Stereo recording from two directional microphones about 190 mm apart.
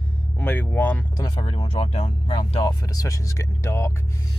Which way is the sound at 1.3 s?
30° left (ahead or behind).